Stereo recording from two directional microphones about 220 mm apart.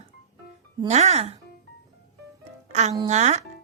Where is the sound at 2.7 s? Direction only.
30° right (ahead or behind).